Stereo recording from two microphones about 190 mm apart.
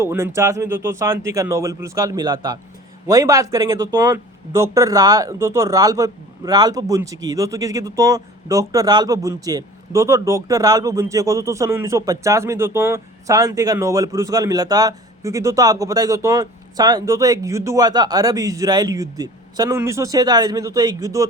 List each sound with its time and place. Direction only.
0.0 s speech: 15° right (ahead or behind)